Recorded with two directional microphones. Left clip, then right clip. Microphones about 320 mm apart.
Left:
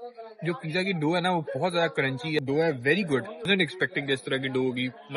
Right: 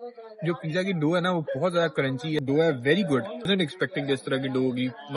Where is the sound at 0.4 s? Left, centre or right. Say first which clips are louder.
Right 1 dB; centre.